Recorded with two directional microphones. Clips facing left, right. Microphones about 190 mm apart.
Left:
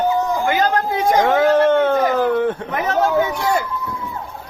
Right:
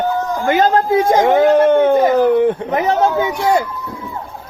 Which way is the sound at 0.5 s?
25° right (ahead or behind).